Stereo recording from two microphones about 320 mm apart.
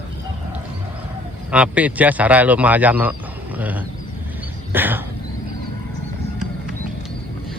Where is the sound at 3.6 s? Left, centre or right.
Centre.